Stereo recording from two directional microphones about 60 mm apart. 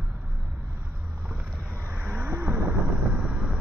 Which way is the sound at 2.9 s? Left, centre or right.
Right.